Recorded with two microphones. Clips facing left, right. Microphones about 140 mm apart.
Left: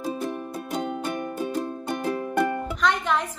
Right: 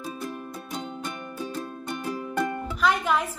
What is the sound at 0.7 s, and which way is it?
Music, 50° left (ahead or behind).